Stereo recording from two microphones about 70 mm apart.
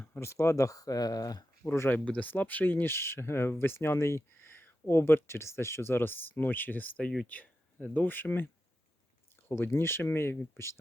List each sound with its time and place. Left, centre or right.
0.0 s speech: left
1.6 s speech: left
1.9 s speech: left
9.5 s speech: left